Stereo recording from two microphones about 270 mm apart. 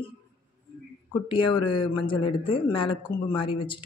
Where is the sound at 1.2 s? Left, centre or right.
Centre.